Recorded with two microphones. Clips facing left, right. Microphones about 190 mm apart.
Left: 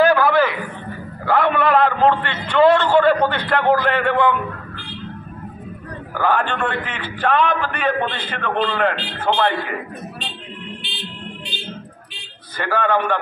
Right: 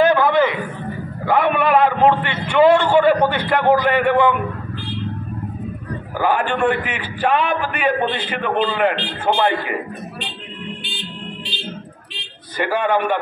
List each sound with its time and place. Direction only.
0.0 s a sound: 20° right (ahead or behind)
6.1 s a man's voice: 15° right (ahead or behind)
12.5 s a man's voice: 15° right (ahead or behind)